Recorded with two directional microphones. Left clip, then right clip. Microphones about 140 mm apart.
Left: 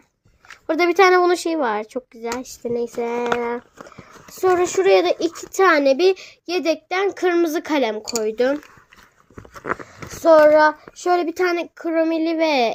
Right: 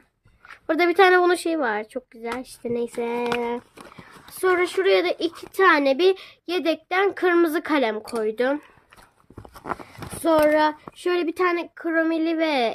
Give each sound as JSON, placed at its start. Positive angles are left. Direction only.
{"t": 0.7, "sound": "a child's voice", "side_deg": 0}
{"t": 2.6, "sound": "a sound", "side_deg": -20}
{"t": 3.8, "sound": "a child's voice", "side_deg": -20}
{"t": 9.7, "sound": "a sound", "side_deg": -25}
{"t": 10.4, "sound": "child singing", "side_deg": -35}
{"t": 10.8, "sound": "speech", "side_deg": -15}
{"t": 11.4, "sound": "a child's voice", "side_deg": 10}